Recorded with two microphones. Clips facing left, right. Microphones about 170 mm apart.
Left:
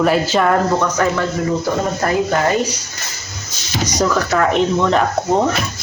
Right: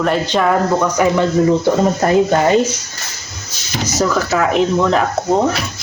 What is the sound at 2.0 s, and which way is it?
Speech, 25° right (ahead or behind).